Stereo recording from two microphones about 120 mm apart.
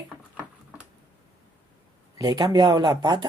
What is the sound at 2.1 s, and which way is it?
Speech, 35° right (ahead or behind).